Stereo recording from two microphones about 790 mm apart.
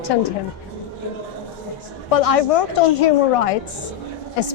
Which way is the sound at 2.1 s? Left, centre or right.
Left.